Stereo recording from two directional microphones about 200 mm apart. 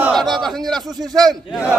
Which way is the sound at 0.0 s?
Centre (ahead or behind).